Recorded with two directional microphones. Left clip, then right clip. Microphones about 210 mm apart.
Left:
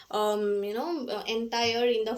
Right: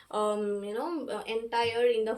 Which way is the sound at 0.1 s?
30° left (ahead or behind).